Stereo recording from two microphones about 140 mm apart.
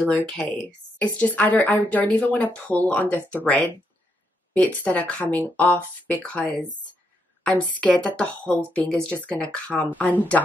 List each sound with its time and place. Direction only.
0.0 s speech: 10° left (ahead or behind)